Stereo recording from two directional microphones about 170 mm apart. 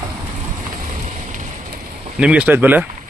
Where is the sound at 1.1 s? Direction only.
50° right (ahead or behind).